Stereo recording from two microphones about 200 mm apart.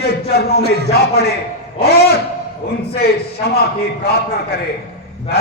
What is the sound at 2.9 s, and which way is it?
Speech, 50° left (ahead or behind).